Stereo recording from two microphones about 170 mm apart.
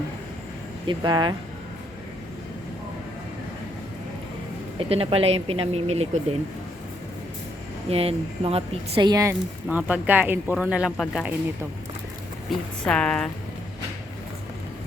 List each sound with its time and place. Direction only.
0.9 s speech: 25° right (ahead or behind)
4.8 s a woman's voice: 35° right (ahead or behind)
7.9 s a woman's voice: 35° right (ahead or behind)
9.6 s speech: 10° right (ahead or behind)
12.5 s a woman's voice: 5° left (ahead or behind)